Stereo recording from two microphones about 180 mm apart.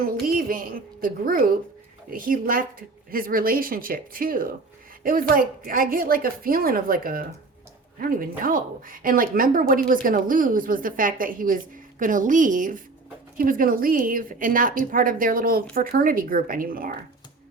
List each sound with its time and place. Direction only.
0.0 s a woman's voice: 55° right (ahead or behind)